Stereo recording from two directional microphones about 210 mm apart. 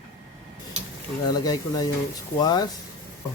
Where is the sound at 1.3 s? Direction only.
20° left (ahead or behind).